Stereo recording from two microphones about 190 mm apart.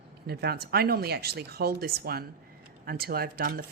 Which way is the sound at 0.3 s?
55° right (ahead or behind).